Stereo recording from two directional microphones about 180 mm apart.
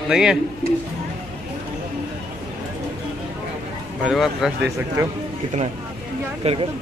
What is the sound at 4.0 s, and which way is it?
Speech, centre (ahead or behind).